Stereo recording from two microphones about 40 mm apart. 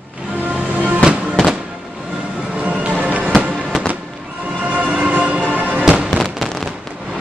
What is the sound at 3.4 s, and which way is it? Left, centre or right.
Fireworks, right.